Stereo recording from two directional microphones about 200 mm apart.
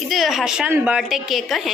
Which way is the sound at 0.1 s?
Centre (ahead or behind).